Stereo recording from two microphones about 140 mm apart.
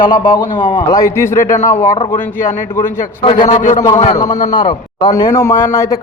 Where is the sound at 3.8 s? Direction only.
40° left (ahead or behind).